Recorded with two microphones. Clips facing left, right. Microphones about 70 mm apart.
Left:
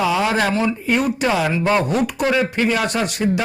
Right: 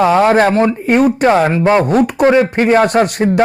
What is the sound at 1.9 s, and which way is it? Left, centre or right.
Speech, right.